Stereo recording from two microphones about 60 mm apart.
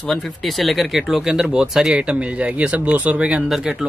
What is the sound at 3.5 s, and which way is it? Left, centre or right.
Speech, centre.